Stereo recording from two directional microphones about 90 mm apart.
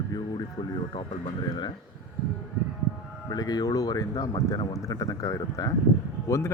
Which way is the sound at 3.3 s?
45° left (ahead or behind).